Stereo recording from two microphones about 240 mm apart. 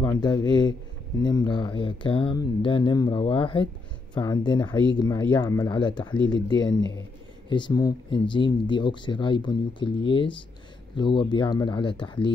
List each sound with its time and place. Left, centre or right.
0.0 s speech: centre